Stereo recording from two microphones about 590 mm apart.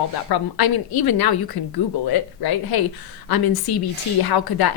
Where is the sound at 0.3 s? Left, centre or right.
Left.